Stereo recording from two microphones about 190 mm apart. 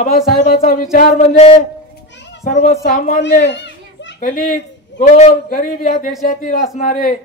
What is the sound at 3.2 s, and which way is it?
Children playing, 65° left (ahead or behind).